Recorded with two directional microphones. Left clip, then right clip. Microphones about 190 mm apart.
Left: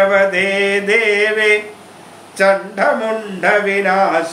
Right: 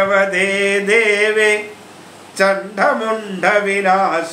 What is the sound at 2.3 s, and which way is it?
Speech, 20° right (ahead or behind).